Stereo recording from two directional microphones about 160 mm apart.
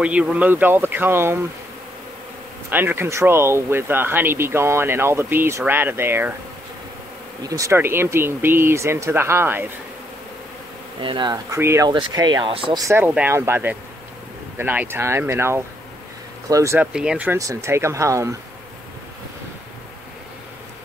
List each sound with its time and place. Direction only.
0.0 s speech: 5° right (ahead or behind)
2.7 s speech: 10° right (ahead or behind)
7.4 s speech: 20° right (ahead or behind)
11.0 s speech: 30° right (ahead or behind)
11.6 s speech: 15° right (ahead or behind)
11.9 s speech: 25° right (ahead or behind)
12.8 s speech: 10° right (ahead or behind)
16.8 s speech: 5° right (ahead or behind)
17.4 s speech: 20° right (ahead or behind)